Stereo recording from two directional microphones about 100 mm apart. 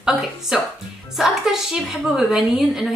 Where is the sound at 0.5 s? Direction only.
5° right (ahead or behind).